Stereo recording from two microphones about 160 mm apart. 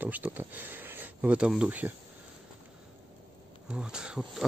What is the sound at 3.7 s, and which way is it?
Speech, 5° right (ahead or behind).